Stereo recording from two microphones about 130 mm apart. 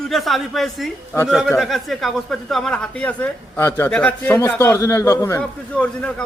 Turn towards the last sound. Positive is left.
turn(degrees=10)  # may be behind; listen again after turning